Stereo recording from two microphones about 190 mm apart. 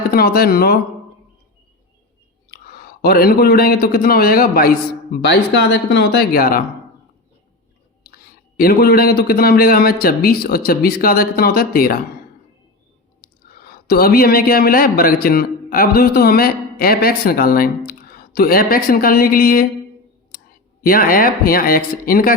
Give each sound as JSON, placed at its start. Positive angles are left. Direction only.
{"t": 0.1, "sound": "speech", "side_deg": 55}
{"t": 2.5, "sound": "speech", "side_deg": 55}
{"t": 8.5, "sound": "speech", "side_deg": 50}
{"t": 13.6, "sound": "a man's voice", "side_deg": 55}
{"t": 20.8, "sound": "speech", "side_deg": 45}